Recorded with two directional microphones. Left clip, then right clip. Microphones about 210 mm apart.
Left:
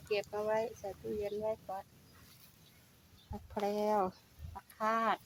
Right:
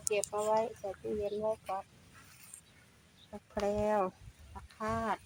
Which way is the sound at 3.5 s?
20° right (ahead or behind).